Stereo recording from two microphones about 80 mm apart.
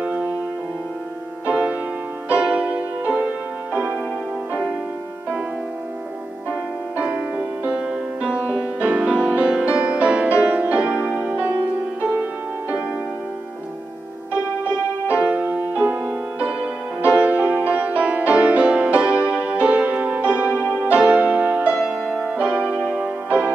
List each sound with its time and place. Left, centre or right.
0.0 s music: centre
1.5 s music: centre
7.0 s music: centre
15.1 s music: centre